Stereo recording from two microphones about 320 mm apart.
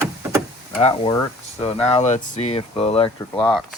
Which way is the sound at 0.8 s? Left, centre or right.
Centre.